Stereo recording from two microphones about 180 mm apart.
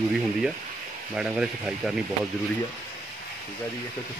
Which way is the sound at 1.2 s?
5° right (ahead or behind).